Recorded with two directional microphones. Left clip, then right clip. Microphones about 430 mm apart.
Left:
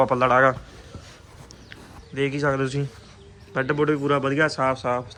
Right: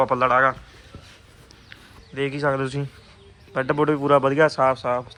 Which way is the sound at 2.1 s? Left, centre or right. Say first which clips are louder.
Even; centre.